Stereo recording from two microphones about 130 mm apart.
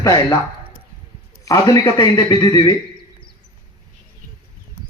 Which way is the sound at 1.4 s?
25° left (ahead or behind).